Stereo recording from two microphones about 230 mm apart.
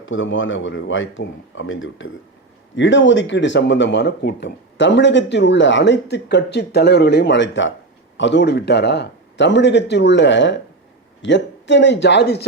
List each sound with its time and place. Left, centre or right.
0.0 s speech: left